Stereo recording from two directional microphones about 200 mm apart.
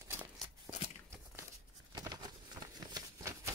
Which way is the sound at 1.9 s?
20° right (ahead or behind).